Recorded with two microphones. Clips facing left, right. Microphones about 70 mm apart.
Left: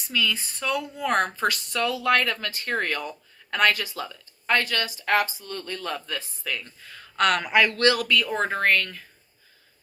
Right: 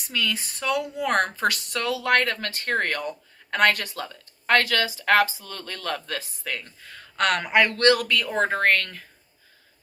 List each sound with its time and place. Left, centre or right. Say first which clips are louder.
0.1 s speech: left 1 dB; right
4.4 s speech: right 3 dB; right
6.4 s speech: even; right